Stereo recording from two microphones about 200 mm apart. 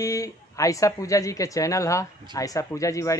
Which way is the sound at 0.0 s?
15° left (ahead or behind).